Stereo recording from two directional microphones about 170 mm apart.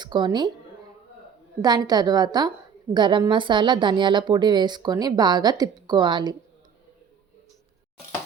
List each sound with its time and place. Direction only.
0.0 s a woman's voice: 25° right (ahead or behind)
1.6 s a woman's voice: 25° right (ahead or behind)